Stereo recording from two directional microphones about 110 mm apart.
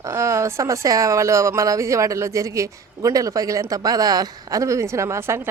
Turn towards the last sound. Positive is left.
turn(degrees=-25)  # may be behind; listen again after turning